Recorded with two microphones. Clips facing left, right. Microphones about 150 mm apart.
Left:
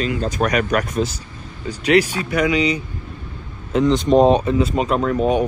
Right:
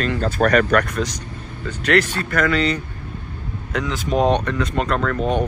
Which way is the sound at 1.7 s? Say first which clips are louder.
Left 3 dB; 10° left (ahead or behind).